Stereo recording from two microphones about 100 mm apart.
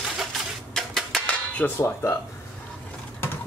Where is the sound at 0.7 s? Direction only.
5° left (ahead or behind).